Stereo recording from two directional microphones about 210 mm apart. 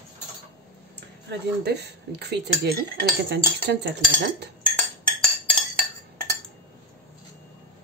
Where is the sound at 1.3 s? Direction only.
55° right (ahead or behind).